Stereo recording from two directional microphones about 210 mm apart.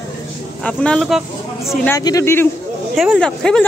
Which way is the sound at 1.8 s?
15° left (ahead or behind).